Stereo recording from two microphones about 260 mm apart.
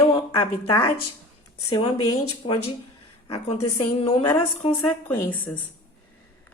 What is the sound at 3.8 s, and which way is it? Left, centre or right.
Speech, left.